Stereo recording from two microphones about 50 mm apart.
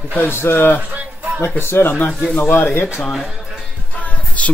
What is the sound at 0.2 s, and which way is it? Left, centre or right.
A man's voice, left.